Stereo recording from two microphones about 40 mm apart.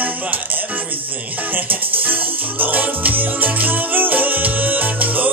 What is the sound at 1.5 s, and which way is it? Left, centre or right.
Music, right.